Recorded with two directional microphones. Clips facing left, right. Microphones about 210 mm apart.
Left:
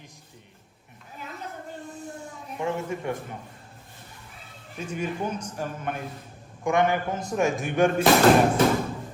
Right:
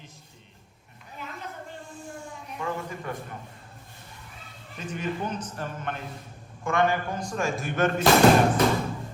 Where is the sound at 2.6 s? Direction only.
20° left (ahead or behind).